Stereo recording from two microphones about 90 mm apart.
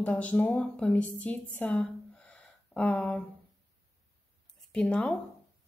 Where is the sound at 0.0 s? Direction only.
15° left (ahead or behind).